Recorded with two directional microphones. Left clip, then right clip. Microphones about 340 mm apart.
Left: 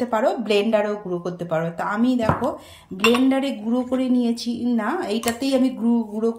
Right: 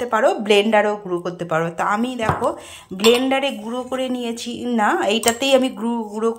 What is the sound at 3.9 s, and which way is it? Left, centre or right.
A woman's voice, centre.